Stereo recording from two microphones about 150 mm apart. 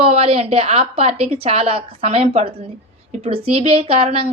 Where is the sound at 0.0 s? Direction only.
45° right (ahead or behind).